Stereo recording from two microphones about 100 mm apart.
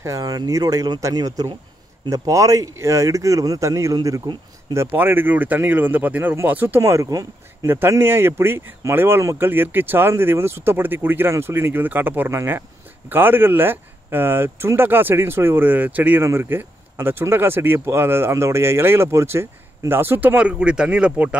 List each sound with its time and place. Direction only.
0.0 s speech: 35° right (ahead or behind)
4.7 s speech: 20° right (ahead or behind)
6.8 s speech: 35° right (ahead or behind); by 21.4 s 15° right (ahead or behind)